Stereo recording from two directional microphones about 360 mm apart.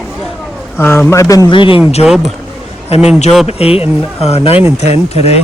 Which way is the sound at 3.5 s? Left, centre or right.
Centre.